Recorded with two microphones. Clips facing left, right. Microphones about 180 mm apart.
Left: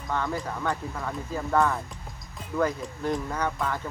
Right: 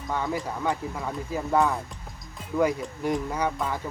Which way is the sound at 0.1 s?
10° right (ahead or behind).